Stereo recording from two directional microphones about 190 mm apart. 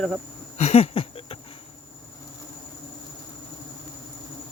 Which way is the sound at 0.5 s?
35° left (ahead or behind).